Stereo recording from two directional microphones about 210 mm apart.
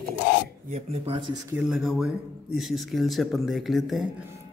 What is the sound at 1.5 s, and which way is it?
Speech, centre (ahead or behind).